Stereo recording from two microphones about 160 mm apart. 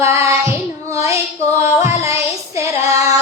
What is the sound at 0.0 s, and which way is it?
Child singing, 20° right (ahead or behind).